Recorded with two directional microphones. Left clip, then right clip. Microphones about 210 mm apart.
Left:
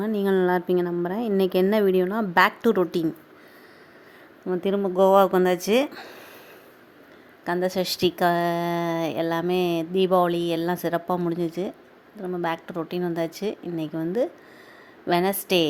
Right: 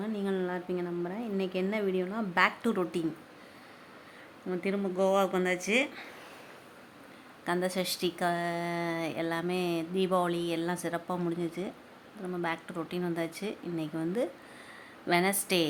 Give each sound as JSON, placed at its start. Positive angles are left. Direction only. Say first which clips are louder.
{"t": 0.0, "sound": "speech", "louder": "left 11 dB", "side_deg": 30}
{"t": 4.6, "sound": "speech", "louder": "left 9 dB", "side_deg": 30}
{"t": 7.4, "sound": "a woman's voice", "louder": "left 6 dB", "side_deg": 20}